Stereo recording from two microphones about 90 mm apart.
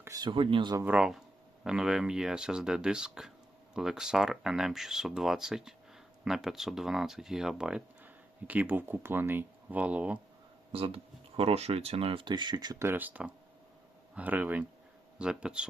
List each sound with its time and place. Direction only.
0.2 s speech: 65° right (ahead or behind)
0.9 s speech: 10° right (ahead or behind)
8.0 s speech: 20° right (ahead or behind)
10.7 s speech: 90° right; by 12.7 s 55° right (ahead or behind)
12.8 s speech: 20° right (ahead or behind)